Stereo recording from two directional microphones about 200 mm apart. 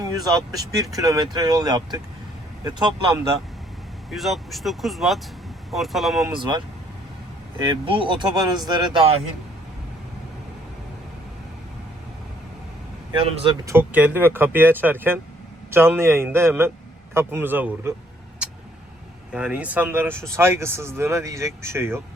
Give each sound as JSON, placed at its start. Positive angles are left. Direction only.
{"t": 0.0, "sound": "speech", "side_deg": -20}
{"t": 4.1, "sound": "speech", "side_deg": 0}
{"t": 6.3, "sound": "speech", "side_deg": -25}
{"t": 7.6, "sound": "speech", "side_deg": -25}
{"t": 13.1, "sound": "speech", "side_deg": -25}
{"t": 13.7, "sound": "speech", "side_deg": -10}
{"t": 19.3, "sound": "speech", "side_deg": -5}